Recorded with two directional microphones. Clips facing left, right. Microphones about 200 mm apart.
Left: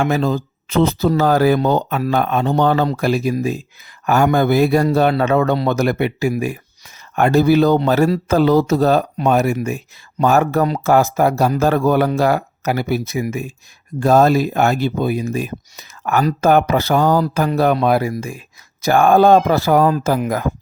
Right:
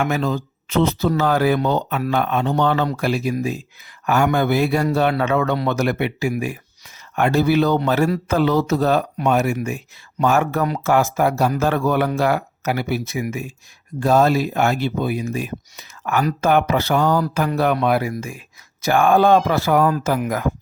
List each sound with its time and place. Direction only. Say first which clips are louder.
0.0 s speech: left 3 dB; 35° left (ahead or behind)